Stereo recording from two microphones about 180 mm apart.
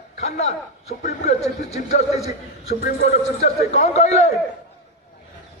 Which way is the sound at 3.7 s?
35° left (ahead or behind).